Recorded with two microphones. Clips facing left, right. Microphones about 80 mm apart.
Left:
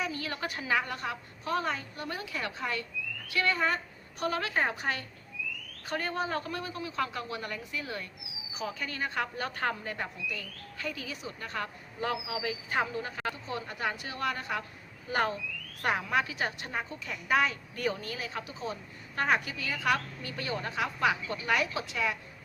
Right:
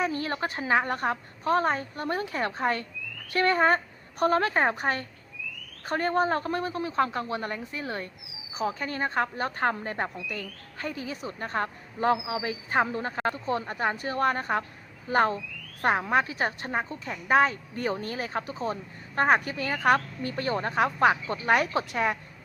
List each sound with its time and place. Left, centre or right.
0.0 s a woman's voice: right